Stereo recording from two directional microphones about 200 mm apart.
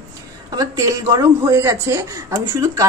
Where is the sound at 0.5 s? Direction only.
15° right (ahead or behind).